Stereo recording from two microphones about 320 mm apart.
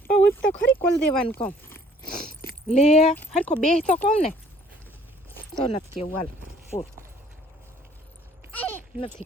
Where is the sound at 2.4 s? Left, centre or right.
Left.